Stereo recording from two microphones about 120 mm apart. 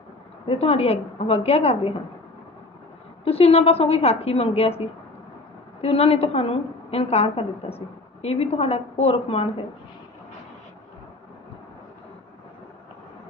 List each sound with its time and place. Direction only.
0.4 s a woman's voice: 55° left (ahead or behind)
3.2 s a woman's voice: 55° left (ahead or behind)
5.8 s a woman's voice: 55° left (ahead or behind)